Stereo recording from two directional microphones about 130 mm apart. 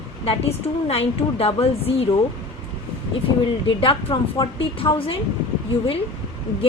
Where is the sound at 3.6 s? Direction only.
40° left (ahead or behind).